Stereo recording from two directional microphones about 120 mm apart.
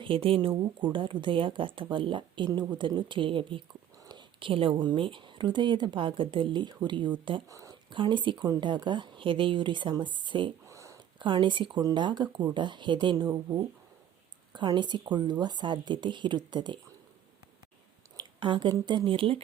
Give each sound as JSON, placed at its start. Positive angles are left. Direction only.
{"t": 0.0, "sound": "speech", "side_deg": -50}
{"t": 7.4, "sound": "speech", "side_deg": -25}
{"t": 7.9, "sound": "speech", "side_deg": -40}
{"t": 10.7, "sound": "a sound", "side_deg": -25}
{"t": 11.2, "sound": "speech", "side_deg": -40}
{"t": 18.2, "sound": "speech", "side_deg": -40}